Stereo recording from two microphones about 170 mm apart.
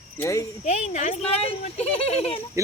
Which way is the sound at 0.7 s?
40° left (ahead or behind).